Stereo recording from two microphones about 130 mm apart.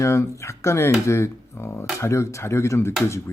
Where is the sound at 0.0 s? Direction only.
20° left (ahead or behind).